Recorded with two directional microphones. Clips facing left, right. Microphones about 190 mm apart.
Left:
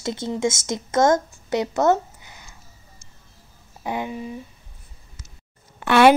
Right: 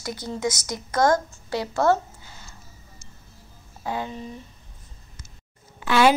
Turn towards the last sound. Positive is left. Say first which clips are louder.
# left 4 dB
turn(degrees=60)  # may be behind; listen again after turning